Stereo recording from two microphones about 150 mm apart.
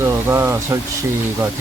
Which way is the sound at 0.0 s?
15° right (ahead or behind).